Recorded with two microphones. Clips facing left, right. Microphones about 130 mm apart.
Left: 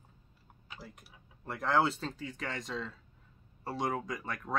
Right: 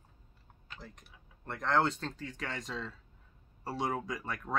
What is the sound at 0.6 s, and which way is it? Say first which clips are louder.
Speech: left 1 dB; 5° left (ahead or behind).